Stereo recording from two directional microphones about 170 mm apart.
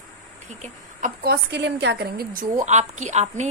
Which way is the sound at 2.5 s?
45° right (ahead or behind).